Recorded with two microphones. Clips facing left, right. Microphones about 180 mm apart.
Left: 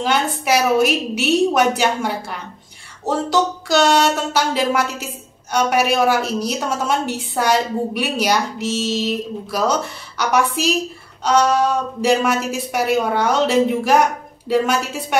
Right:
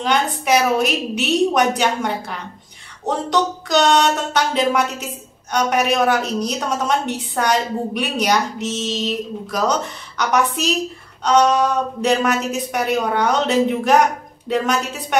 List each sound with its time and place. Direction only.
0.0 s a woman's voice: 5° left (ahead or behind)